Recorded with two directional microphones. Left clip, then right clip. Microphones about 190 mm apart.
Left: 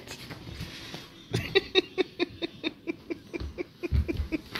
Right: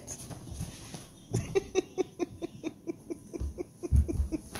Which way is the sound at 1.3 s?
Centre (ahead or behind).